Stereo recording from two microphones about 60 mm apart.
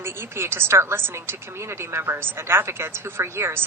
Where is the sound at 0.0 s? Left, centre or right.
Right.